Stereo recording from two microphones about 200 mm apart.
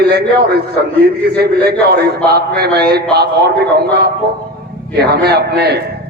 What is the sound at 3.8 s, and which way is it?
A man's voice, 55° right (ahead or behind).